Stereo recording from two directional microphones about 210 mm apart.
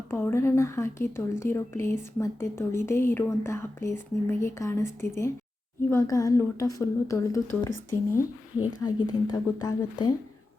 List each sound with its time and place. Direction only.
0.1 s speech: 10° left (ahead or behind)
8.8 s speech: 20° left (ahead or behind)